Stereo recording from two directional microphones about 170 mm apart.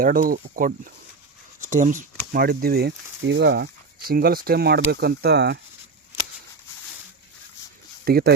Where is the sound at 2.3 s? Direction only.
60° right (ahead or behind).